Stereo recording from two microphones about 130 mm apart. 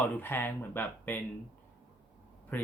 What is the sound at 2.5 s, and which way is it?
Speech, 10° left (ahead or behind).